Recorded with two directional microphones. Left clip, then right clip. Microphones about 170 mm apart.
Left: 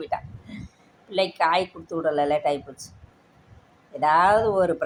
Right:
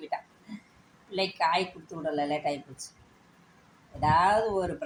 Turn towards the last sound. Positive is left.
turn(degrees=15)  # may be behind; listen again after turning